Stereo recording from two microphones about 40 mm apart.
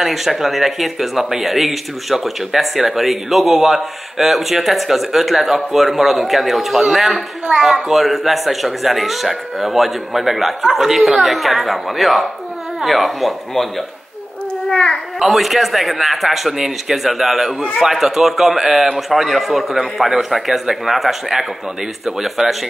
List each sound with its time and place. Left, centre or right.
0.0 s speech: centre
14.7 s a child's voice: centre
15.1 s a man's voice: centre